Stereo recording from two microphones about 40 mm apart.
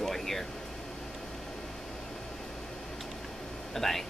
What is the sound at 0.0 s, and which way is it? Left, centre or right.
Air conditioning, centre.